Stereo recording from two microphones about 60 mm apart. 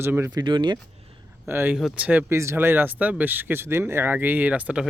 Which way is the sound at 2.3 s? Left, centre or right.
Right.